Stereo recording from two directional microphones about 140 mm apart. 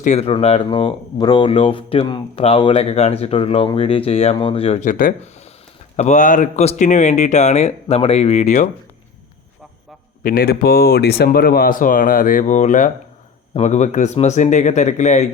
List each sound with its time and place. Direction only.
0.0 s speech: 50° left (ahead or behind)
10.2 s speech: 90° left; by 15.3 s 60° left (ahead or behind)